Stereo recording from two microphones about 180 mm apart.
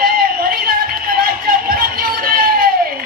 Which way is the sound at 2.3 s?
55° right (ahead or behind).